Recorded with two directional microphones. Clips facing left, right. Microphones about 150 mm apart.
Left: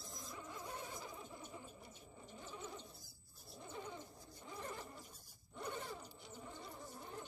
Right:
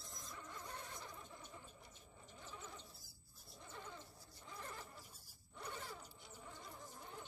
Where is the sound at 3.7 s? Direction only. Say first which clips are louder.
Left 5 dB; 15° left (ahead or behind).